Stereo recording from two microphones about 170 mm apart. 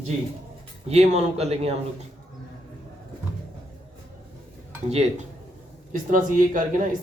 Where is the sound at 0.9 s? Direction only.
40° right (ahead or behind).